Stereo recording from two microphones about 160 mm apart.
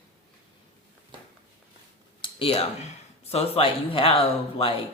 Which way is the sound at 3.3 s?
40° left (ahead or behind).